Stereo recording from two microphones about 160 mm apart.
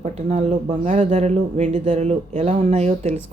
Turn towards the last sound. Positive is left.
turn(degrees=-45)  # may be behind; listen again after turning